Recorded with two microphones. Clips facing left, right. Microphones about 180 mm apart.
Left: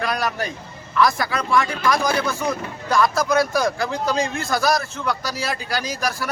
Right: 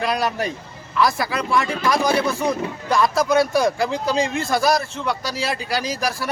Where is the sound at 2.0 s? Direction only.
30° right (ahead or behind).